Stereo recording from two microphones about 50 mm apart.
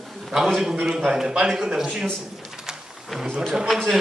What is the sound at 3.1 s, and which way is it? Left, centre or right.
Speech, centre.